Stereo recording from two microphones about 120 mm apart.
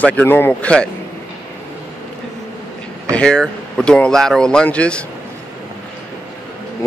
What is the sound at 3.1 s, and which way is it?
Speech, 10° left (ahead or behind).